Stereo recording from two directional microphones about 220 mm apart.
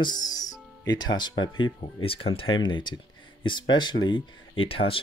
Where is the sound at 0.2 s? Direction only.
15° left (ahead or behind).